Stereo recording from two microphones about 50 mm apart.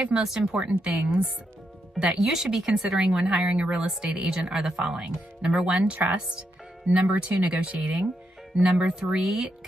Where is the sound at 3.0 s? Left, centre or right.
Right.